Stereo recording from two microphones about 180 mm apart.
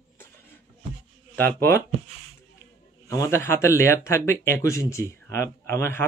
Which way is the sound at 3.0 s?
15° left (ahead or behind).